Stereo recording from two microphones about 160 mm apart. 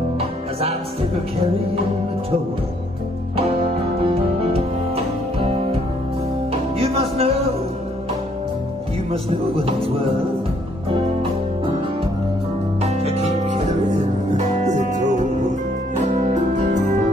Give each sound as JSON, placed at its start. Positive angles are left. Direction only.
{"t": 0.2, "sound": "music", "side_deg": -40}
{"t": 4.0, "sound": "music", "side_deg": -40}
{"t": 6.8, "sound": "music", "side_deg": -35}
{"t": 9.7, "sound": "music", "side_deg": -35}
{"t": 12.8, "sound": "music", "side_deg": -40}